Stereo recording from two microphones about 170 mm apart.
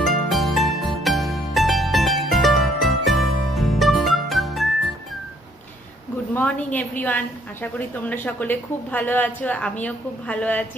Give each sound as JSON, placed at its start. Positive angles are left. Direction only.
{"t": 0.0, "sound": "music", "side_deg": 0}
{"t": 6.3, "sound": "a woman's voice", "side_deg": 10}